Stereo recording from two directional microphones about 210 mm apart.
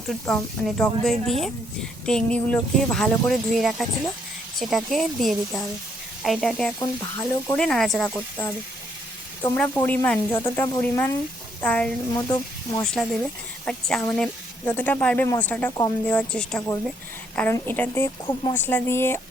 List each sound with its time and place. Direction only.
0.8 s speech: centre (ahead or behind)
6.7 s speech: 15° left (ahead or behind)
7.5 s speech: 5° left (ahead or behind)